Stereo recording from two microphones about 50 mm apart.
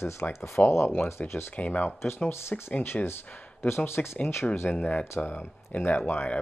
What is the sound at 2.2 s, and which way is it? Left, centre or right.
Speech, left.